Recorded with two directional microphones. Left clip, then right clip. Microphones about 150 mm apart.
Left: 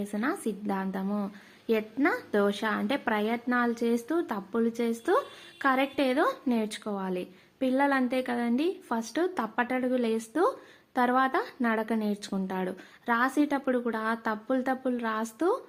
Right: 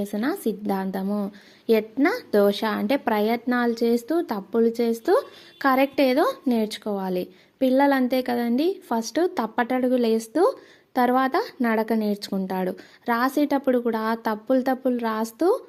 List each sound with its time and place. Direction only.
0.0 s a woman's voice: 45° right (ahead or behind)